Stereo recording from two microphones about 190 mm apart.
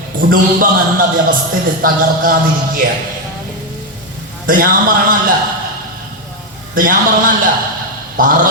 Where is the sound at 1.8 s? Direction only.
50° right (ahead or behind).